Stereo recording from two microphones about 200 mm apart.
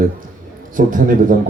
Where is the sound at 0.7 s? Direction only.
45° right (ahead or behind).